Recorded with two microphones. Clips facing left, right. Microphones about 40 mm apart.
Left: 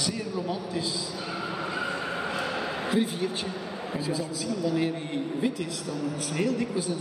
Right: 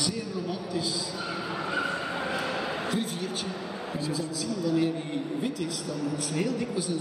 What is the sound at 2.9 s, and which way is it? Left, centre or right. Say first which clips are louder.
Speech: left 4 dB; centre.